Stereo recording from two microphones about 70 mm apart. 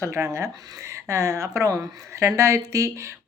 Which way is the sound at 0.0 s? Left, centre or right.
Right.